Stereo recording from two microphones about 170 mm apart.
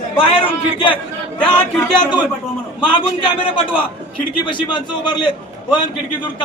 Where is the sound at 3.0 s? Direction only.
30° left (ahead or behind).